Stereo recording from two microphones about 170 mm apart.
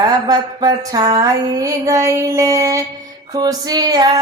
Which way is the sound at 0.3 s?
25° right (ahead or behind).